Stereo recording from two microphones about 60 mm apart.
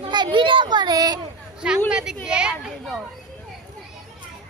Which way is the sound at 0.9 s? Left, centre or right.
Right.